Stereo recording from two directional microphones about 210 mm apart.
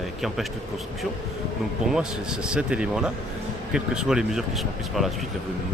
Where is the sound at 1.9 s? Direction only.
5° right (ahead or behind).